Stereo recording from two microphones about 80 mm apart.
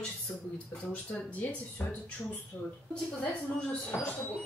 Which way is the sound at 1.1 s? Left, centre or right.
Centre.